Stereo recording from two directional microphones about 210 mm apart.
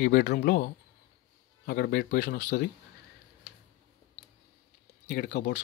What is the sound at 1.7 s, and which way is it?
Speech, 45° left (ahead or behind).